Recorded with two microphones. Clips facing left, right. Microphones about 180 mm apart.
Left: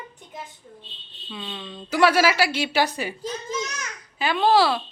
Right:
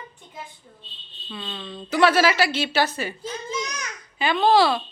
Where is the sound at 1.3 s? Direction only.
5° left (ahead or behind).